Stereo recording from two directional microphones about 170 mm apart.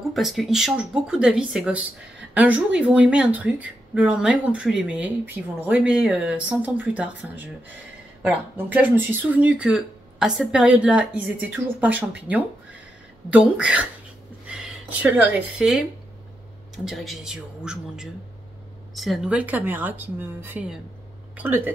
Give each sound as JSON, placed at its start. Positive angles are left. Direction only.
{"t": 0.1, "sound": "speech", "side_deg": 0}